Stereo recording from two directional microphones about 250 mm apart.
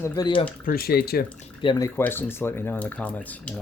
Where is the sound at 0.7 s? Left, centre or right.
Left.